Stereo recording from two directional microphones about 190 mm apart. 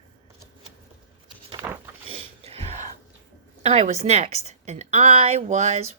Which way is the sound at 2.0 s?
30° right (ahead or behind).